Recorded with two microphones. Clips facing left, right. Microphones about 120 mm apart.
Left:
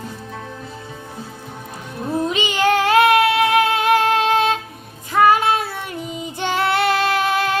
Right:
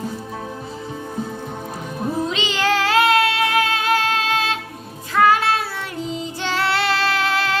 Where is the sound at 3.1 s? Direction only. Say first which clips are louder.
Left 3 dB; 20° left (ahead or behind).